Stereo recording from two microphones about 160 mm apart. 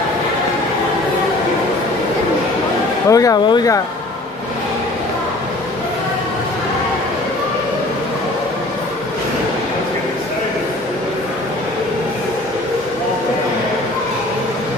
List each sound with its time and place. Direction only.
3.1 s speech: 20° left (ahead or behind)